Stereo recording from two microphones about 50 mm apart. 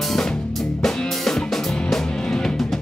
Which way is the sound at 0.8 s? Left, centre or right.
Centre.